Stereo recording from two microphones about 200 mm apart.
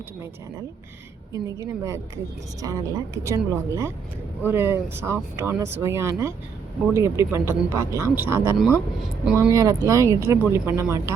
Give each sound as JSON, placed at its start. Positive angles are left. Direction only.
{"t": 1.3, "sound": "speech", "side_deg": -15}